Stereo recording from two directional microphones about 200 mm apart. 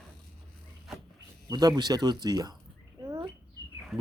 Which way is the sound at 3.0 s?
15° right (ahead or behind).